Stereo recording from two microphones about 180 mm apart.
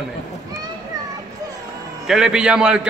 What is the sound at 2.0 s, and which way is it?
Speech, 5° right (ahead or behind).